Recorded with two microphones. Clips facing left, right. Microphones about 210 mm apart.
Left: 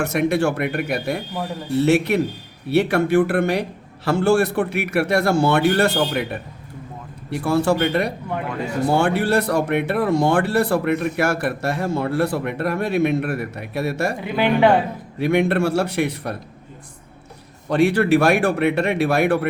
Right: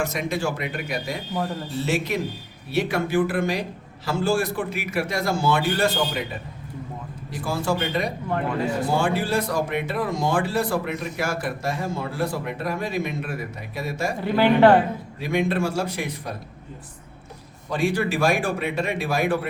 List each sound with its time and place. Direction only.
0.0 s a man's voice: 65° left (ahead or behind)
14.3 s speech: centre (ahead or behind)
15.2 s speech: 65° left (ahead or behind)
17.7 s speech: 65° left (ahead or behind)